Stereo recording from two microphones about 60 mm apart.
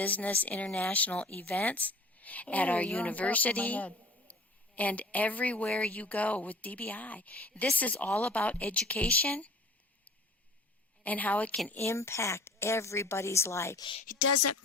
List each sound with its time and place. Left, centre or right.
0.0 s speech: left
11.0 s speech: left
11.9 s a woman's voice: left